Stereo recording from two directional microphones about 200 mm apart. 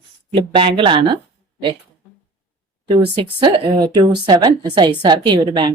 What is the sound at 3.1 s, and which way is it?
A woman's voice, 25° right (ahead or behind).